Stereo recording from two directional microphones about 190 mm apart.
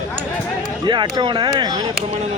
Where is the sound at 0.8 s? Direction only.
25° right (ahead or behind).